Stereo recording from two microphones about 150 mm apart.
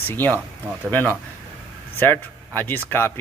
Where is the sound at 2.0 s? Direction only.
15° left (ahead or behind).